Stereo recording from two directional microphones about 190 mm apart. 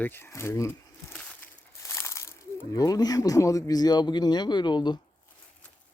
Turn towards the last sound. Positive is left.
turn(degrees=25)  # may be behind; listen again after turning